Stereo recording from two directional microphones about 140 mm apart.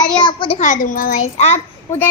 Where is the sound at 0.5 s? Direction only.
65° left (ahead or behind).